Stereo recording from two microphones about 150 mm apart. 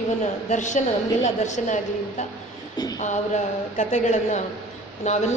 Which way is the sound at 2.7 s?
25° left (ahead or behind).